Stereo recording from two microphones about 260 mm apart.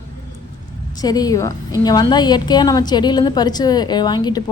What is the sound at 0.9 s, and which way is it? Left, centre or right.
A woman's voice, centre.